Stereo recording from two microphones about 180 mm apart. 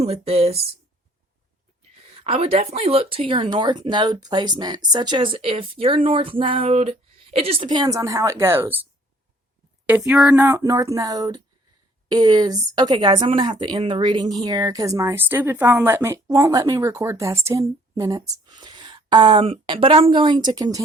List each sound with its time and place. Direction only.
0.0 s speech: 35° right (ahead or behind)
2.1 s speech: 35° right (ahead or behind); by 8.8 s 10° right (ahead or behind)
9.8 s speech: 10° right (ahead or behind)